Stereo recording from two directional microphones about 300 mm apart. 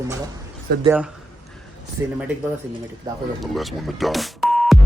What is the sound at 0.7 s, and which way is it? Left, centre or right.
Speech, right.